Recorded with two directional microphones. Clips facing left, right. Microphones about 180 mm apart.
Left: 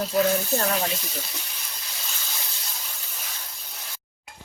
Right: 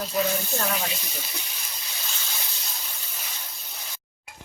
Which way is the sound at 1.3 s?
Centre (ahead or behind).